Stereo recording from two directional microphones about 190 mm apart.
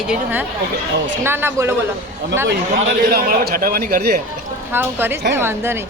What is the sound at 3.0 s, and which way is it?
A man's voice, 55° right (ahead or behind).